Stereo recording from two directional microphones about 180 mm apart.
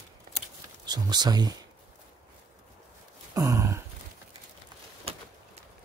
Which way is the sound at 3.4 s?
15° right (ahead or behind).